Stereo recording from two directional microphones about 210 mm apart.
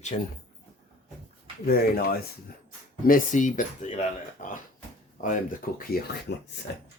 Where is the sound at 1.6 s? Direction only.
45° left (ahead or behind).